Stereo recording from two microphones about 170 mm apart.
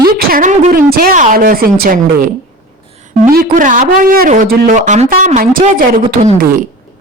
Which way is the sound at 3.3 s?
55° right (ahead or behind).